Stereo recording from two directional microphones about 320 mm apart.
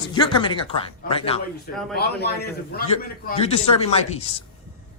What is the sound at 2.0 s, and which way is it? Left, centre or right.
Speech, left.